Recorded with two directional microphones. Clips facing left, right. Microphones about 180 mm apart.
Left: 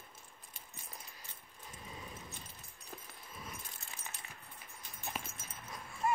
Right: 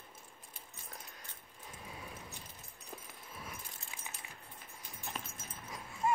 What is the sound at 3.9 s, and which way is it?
Keys jangling, 10° right (ahead or behind).